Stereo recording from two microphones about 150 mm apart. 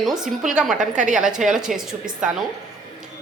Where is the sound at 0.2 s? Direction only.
5° right (ahead or behind).